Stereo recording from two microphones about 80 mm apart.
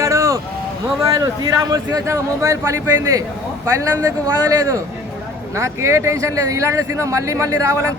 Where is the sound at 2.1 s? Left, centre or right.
Right.